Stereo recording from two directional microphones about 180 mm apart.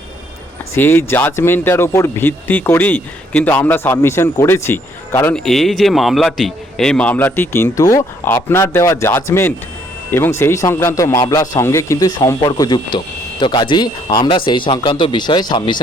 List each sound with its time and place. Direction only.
0.7 s speech: 10° left (ahead or behind)